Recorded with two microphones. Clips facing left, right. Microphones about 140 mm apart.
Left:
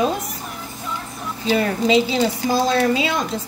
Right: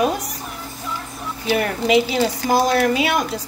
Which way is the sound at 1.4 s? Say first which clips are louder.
Left 1 dB; 25° left (ahead or behind).